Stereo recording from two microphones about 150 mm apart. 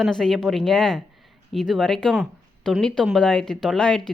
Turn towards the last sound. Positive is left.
turn(degrees=5)  # may be behind; listen again after turning